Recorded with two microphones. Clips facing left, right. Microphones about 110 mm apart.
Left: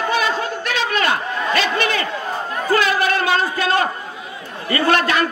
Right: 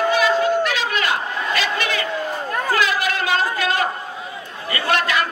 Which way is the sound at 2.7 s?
40° left (ahead or behind).